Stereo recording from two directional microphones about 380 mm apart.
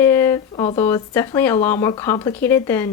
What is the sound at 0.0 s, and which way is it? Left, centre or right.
Speech, centre.